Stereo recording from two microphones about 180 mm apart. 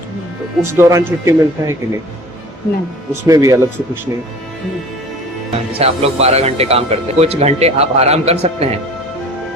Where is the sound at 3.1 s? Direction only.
15° right (ahead or behind).